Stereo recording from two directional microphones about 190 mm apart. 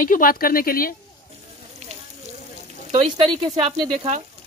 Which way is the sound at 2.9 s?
30° right (ahead or behind).